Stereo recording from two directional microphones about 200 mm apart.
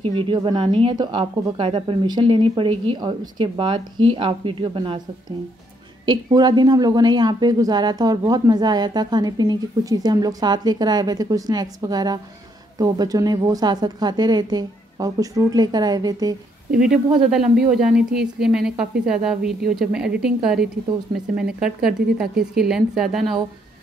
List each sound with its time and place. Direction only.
0.0 s a woman's voice: 25° right (ahead or behind)
6.0 s a woman's voice: 20° right (ahead or behind)
16.8 s speech: 5° right (ahead or behind)